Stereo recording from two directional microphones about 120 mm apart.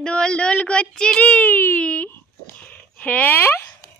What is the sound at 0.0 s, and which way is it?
Speech, 10° left (ahead or behind).